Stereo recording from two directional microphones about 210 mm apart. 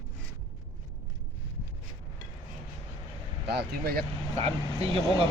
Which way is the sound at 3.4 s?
50° right (ahead or behind).